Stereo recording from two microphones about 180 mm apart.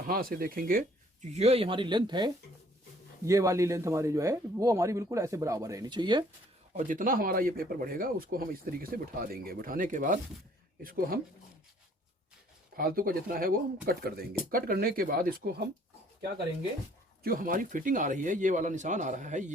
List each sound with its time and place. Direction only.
0.1 s speech: 55° right (ahead or behind); by 6.2 s 25° right (ahead or behind)
6.7 s speech: 45° right (ahead or behind)
12.7 s speech: 55° right (ahead or behind)
17.2 s speech: 50° right (ahead or behind)